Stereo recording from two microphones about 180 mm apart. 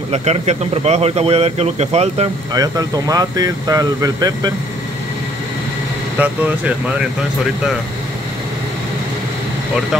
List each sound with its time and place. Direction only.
0.1 s speech: 35° right (ahead or behind)
2.5 s speech: 20° right (ahead or behind)
6.1 s speech: 10° right (ahead or behind)